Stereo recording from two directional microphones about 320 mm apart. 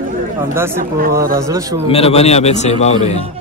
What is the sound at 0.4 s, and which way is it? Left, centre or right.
Mantra, centre.